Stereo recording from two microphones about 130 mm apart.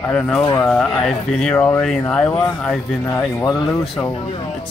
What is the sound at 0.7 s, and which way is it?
Speech, 5° left (ahead or behind).